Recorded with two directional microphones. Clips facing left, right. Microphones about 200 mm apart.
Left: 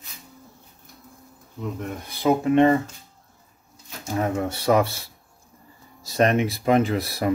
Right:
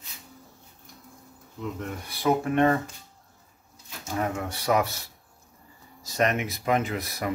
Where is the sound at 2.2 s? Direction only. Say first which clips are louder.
Left 5 dB; 20° left (ahead or behind).